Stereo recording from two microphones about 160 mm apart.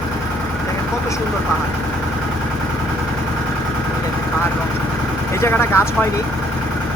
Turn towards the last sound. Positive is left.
turn(degrees=15)  # may be behind; listen again after turning